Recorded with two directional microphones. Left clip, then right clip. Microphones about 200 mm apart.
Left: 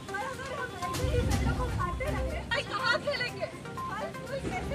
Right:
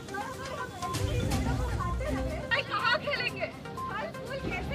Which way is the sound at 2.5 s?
25° left (ahead or behind).